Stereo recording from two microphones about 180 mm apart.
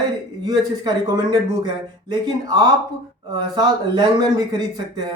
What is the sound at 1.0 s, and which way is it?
A man's voice, 20° right (ahead or behind).